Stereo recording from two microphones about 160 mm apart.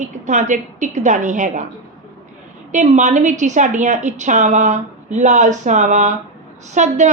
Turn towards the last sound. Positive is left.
turn(degrees=-45)  # may be behind; listen again after turning